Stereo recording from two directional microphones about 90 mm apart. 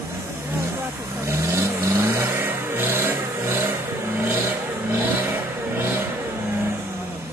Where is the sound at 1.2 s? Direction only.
30° right (ahead or behind).